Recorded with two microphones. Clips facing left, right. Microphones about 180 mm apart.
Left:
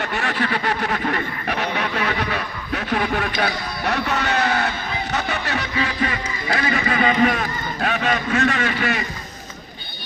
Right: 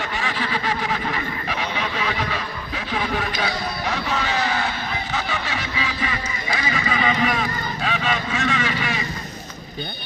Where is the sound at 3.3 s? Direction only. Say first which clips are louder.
Left 2 dB; 60° left (ahead or behind).